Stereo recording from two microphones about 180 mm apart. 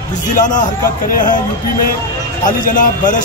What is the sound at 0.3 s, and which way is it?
Speech, 45° left (ahead or behind).